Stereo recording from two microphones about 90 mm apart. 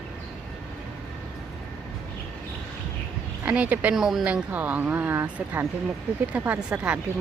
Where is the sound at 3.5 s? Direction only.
15° right (ahead or behind).